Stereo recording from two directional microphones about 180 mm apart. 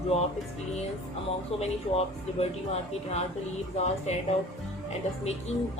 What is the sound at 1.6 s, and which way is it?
Speech, 35° left (ahead or behind).